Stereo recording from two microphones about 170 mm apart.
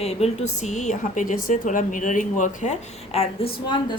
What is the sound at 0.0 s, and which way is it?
A woman's voice, 40° left (ahead or behind).